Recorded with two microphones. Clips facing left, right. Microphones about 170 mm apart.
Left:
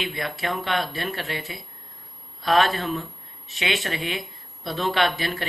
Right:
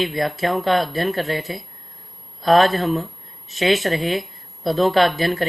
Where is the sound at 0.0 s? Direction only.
40° right (ahead or behind).